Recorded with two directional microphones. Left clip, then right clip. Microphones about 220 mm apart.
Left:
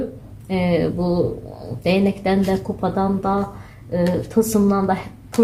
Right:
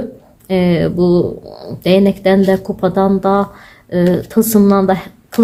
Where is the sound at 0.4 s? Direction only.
40° right (ahead or behind).